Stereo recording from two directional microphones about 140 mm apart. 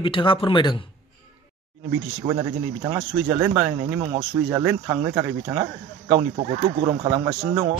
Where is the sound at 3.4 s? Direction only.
15° right (ahead or behind).